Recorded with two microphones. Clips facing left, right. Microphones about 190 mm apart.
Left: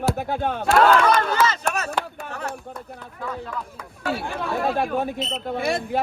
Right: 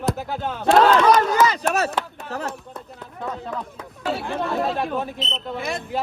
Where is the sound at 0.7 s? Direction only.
35° right (ahead or behind).